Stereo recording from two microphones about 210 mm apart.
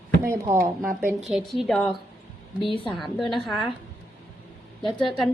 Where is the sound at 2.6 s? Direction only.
25° left (ahead or behind).